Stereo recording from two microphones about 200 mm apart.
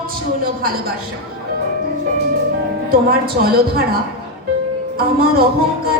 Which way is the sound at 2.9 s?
50° right (ahead or behind).